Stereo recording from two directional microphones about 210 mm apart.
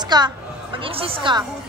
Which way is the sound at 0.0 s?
20° right (ahead or behind).